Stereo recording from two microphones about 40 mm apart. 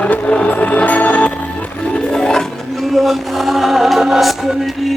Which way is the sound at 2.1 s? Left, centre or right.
Centre.